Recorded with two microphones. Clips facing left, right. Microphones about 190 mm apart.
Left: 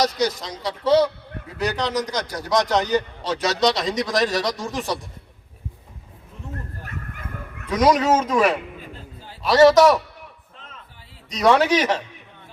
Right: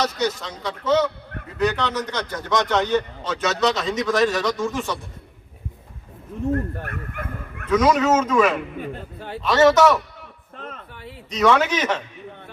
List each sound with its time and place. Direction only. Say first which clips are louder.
0.0 s a man's voice: left 2 dB; 35° left (ahead or behind)
6.5 s bow-wow: right 10 dB; 60° right (ahead or behind)
7.7 s a man's voice: even; 35° left (ahead or behind)
9.1 s a sound: right 10 dB; 65° right (ahead or behind)
9.4 s a man's voice: left 2 dB; 35° left (ahead or behind)
10.6 s music: right 11 dB; 60° right (ahead or behind)
11.3 s a man's voice: left 1 dB; 35° left (ahead or behind)